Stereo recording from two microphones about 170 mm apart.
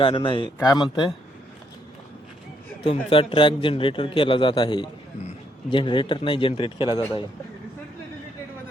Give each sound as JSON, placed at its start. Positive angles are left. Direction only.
{"t": 0.0, "sound": "a man's voice", "side_deg": 30}
{"t": 2.8, "sound": "a man's voice", "side_deg": 30}